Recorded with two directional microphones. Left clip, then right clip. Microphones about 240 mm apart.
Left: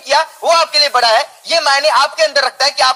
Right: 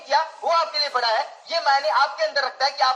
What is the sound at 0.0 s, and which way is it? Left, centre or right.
A man's voice, left.